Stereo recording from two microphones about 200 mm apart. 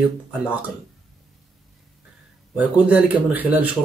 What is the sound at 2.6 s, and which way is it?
Speech, 5° right (ahead or behind).